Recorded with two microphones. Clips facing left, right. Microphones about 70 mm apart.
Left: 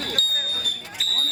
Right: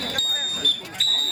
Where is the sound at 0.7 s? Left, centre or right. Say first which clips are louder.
Right 4 dB; centre.